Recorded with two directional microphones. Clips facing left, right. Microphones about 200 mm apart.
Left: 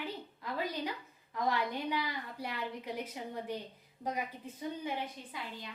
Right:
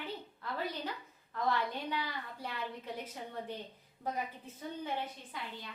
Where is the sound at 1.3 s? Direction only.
10° left (ahead or behind).